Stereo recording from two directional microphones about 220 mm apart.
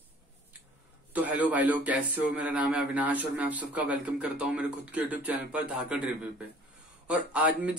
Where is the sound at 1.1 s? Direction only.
5° right (ahead or behind).